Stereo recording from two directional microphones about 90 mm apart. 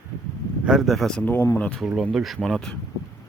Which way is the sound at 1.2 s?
20° left (ahead or behind).